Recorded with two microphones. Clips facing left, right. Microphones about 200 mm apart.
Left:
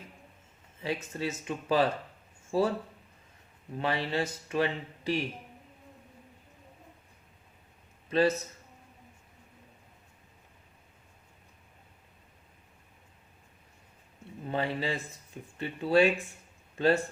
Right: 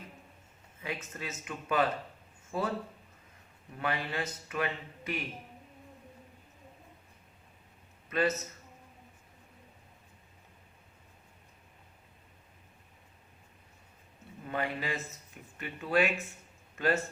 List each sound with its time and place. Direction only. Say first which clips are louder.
1.1 s speech: left 7 dB; 30° left (ahead or behind)
3.8 s speech: left 4 dB; 25° left (ahead or behind)
8.1 s speech: left 4 dB; 30° left (ahead or behind)
14.4 s speech: left 3 dB; 25° left (ahead or behind)